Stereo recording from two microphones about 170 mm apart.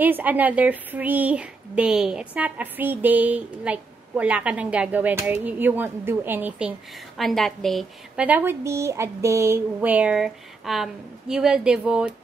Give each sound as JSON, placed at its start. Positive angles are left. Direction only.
{"t": 0.0, "sound": "a woman's voice", "side_deg": -10}
{"t": 7.2, "sound": "a woman's voice", "side_deg": 0}
{"t": 8.3, "sound": "a woman's voice", "side_deg": -10}